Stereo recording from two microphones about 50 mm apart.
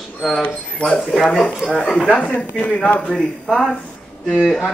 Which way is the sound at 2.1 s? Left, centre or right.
Left.